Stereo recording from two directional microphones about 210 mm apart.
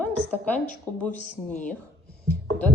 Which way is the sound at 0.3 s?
5° left (ahead or behind).